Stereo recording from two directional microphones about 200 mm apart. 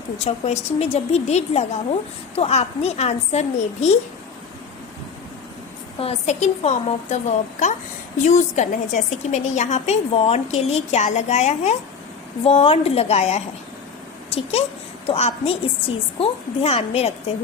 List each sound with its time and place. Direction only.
0.3 s a woman's voice: 30° left (ahead or behind)
6.0 s a woman's voice: 30° left (ahead or behind)